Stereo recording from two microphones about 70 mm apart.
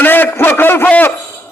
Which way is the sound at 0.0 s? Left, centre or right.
Left.